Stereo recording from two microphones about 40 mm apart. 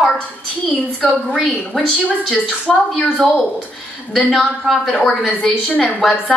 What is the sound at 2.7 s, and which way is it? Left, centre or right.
Speech, centre.